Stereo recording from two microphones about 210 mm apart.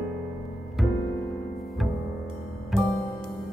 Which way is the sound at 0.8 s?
Centre (ahead or behind).